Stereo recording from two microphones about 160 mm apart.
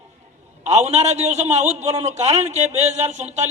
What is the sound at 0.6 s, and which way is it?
A man's voice, 45° right (ahead or behind).